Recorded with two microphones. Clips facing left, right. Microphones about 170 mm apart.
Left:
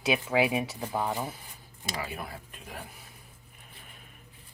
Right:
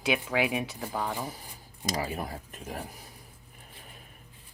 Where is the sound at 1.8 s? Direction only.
40° right (ahead or behind).